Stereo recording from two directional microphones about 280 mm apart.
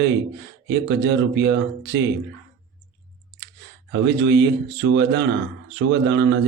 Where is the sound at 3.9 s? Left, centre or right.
Right.